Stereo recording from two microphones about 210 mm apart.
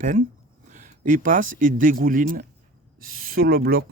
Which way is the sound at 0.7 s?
35° right (ahead or behind).